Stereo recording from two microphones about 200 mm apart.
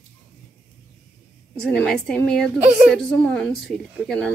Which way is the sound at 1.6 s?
5° left (ahead or behind).